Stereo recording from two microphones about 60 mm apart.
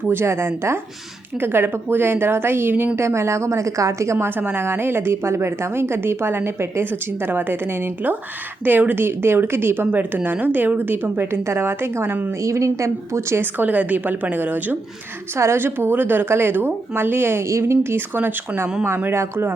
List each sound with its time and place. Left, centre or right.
0.1 s a woman's voice: right
4.4 s a woman's voice: right
7.3 s a woman's voice: right
11.4 s a woman's voice: right
12.4 s speech: right
13.4 s a woman's voice: right
15.4 s a woman's voice: right